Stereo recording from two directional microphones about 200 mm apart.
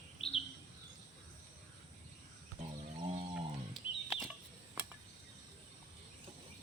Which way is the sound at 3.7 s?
Centre (ahead or behind).